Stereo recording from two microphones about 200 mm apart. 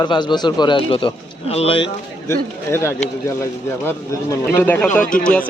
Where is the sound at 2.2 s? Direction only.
10° left (ahead or behind).